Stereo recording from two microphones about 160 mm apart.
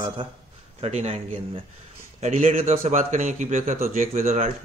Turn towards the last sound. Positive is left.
turn(degrees=-45)  # may be behind; listen again after turning